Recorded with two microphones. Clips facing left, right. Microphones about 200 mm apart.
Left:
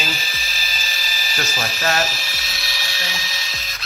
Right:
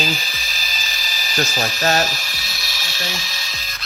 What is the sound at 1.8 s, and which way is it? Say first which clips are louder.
Speech: right 2 dB; 35° right (ahead or behind).